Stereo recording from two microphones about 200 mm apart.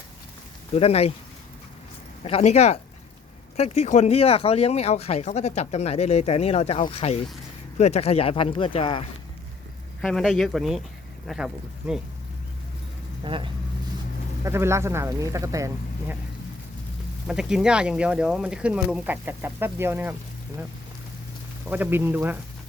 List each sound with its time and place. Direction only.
0.8 s speech: 30° left (ahead or behind)
2.2 s speech: 35° left (ahead or behind)
10.0 s speech: centre (ahead or behind)
13.2 s speech: 25° right (ahead or behind)
14.4 s speech: 15° right (ahead or behind)
17.2 s speech: 5° right (ahead or behind)
21.7 s speech: 10° right (ahead or behind)